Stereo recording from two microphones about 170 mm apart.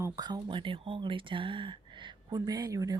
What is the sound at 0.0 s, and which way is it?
Speech, 25° right (ahead or behind).